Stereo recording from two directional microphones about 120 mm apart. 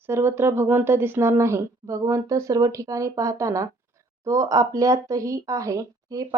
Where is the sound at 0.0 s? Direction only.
20° right (ahead or behind).